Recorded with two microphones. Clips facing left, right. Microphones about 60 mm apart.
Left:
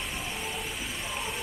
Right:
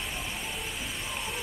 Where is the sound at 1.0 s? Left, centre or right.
Centre.